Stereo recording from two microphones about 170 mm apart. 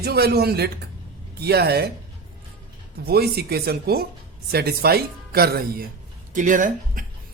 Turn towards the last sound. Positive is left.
turn(degrees=-50)  # may be behind; listen again after turning